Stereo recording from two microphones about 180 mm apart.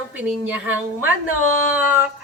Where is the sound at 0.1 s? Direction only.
10° right (ahead or behind).